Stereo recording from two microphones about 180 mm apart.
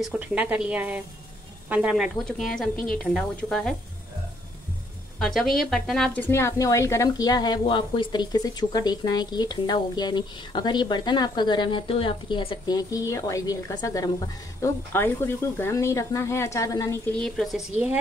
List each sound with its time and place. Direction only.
0.0 s speech: 5° right (ahead or behind)
5.2 s a woman's voice: centre (ahead or behind); by 17.1 s 20° left (ahead or behind)
17.2 s speech: centre (ahead or behind)